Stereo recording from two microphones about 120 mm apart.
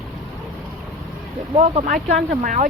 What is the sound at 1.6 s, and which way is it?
Speech, 65° right (ahead or behind).